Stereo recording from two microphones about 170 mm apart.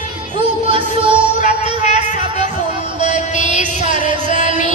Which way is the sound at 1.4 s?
40° left (ahead or behind).